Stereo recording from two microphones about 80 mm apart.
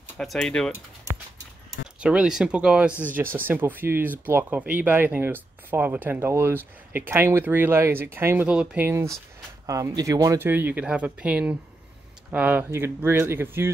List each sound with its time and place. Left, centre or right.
0.2 s speech: centre
2.0 s speech: centre
3.0 s speech: right
8.5 s speech: centre
8.8 s speech: right
9.9 s speech: right
10.4 s speech: right
12.7 s speech: right